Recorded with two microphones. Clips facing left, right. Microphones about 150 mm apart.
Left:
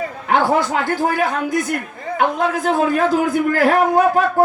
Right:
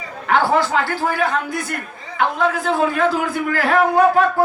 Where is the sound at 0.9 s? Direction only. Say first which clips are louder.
Left 2 dB; 45° left (ahead or behind).